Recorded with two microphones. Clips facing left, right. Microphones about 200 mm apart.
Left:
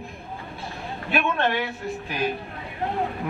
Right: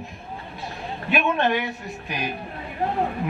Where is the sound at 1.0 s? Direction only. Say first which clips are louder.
Right 2 dB; 15° right (ahead or behind).